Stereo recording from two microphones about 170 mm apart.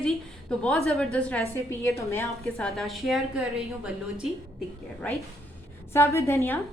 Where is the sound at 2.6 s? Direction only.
Centre (ahead or behind).